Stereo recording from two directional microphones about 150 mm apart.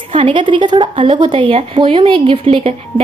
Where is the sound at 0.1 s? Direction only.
35° right (ahead or behind).